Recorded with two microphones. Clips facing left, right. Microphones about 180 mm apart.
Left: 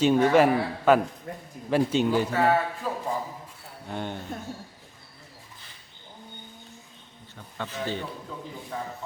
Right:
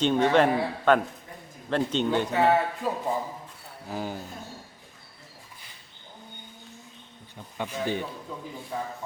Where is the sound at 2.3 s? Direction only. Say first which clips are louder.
Right 1 dB; 20° right (ahead or behind).